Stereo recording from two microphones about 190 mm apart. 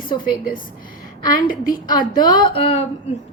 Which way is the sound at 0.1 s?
25° left (ahead or behind).